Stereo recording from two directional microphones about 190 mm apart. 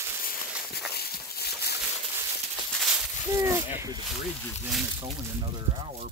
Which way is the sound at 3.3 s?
15° right (ahead or behind).